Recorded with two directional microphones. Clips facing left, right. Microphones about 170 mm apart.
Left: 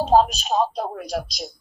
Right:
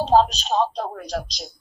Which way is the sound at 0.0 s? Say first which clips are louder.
Even; 10° left (ahead or behind).